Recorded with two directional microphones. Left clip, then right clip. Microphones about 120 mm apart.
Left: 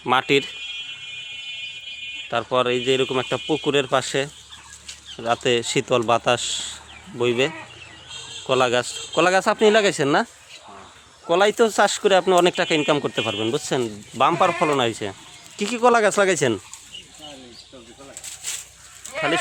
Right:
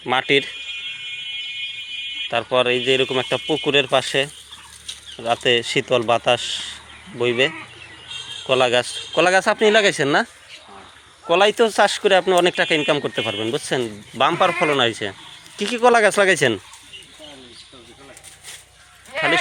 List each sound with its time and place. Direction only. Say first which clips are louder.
0.0 s speech: right 1 dB; 30° left (ahead or behind)
2.3 s speech: right 2 dB; 20° left (ahead or behind)
11.3 s speech: right 2 dB; 15° left (ahead or behind)
14.2 s speech: right 1 dB; 10° left (ahead or behind)
19.1 s sheep: right 3 dB; 20° right (ahead or behind)